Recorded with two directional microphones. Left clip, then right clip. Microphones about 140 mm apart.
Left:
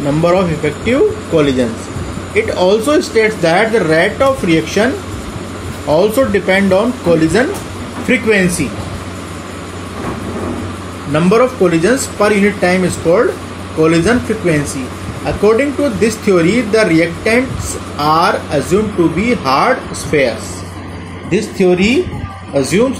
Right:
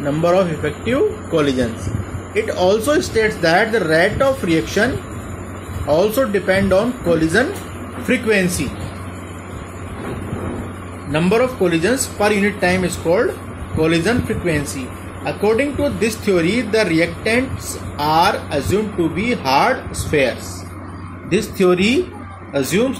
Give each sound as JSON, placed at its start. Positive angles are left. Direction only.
{"t": 0.2, "sound": "speech", "side_deg": -10}
{"t": 5.9, "sound": "speech", "side_deg": -10}
{"t": 11.1, "sound": "speech", "side_deg": -10}
{"t": 21.3, "sound": "speech", "side_deg": -30}
{"t": 22.5, "sound": "speech", "side_deg": -20}